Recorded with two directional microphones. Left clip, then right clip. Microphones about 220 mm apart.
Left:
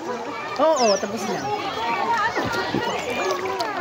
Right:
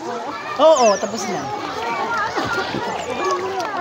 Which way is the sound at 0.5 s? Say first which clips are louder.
Right 6 dB; 25° right (ahead or behind).